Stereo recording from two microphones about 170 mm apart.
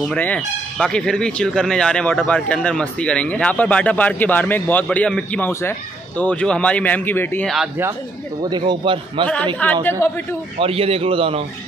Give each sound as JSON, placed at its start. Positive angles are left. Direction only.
{"t": 0.1, "sound": "speech", "side_deg": 5}
{"t": 7.4, "sound": "speech", "side_deg": 0}
{"t": 8.4, "sound": "a man's voice", "side_deg": -25}
{"t": 9.6, "sound": "speech", "side_deg": 10}
{"t": 10.6, "sound": "a man's voice", "side_deg": -35}